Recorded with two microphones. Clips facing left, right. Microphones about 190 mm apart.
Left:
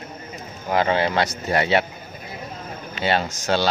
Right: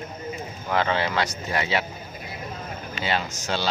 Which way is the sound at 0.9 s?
40° left (ahead or behind).